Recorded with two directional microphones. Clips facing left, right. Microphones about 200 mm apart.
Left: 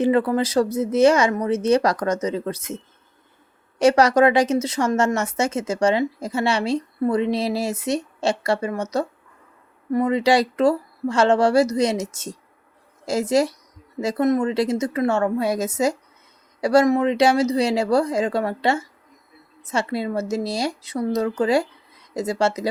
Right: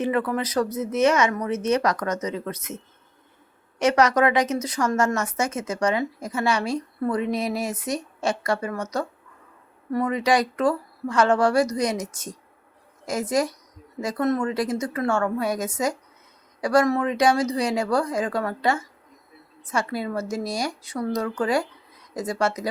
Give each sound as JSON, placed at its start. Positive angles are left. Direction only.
{"t": 0.0, "sound": "a woman's voice", "side_deg": 30}